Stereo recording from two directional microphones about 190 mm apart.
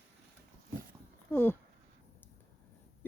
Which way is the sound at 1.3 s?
10° left (ahead or behind).